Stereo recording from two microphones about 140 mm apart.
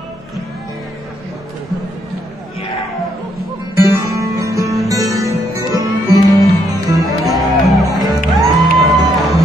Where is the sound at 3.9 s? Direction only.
25° right (ahead or behind).